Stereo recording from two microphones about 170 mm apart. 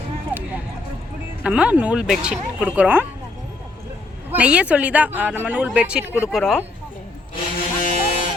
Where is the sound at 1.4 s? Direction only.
5° right (ahead or behind).